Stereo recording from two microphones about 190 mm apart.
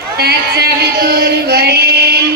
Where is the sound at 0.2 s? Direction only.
55° right (ahead or behind).